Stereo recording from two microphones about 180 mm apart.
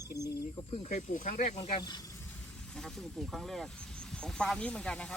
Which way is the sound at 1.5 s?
30° left (ahead or behind).